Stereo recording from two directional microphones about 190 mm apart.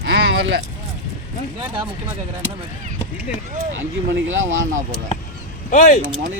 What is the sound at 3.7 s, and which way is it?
Speech, 90° right.